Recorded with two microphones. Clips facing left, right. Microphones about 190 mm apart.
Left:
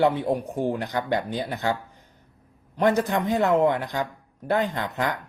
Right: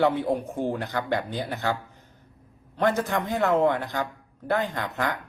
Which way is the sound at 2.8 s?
15° left (ahead or behind).